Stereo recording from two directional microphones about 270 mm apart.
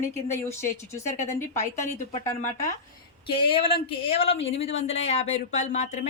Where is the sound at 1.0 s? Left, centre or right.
Left.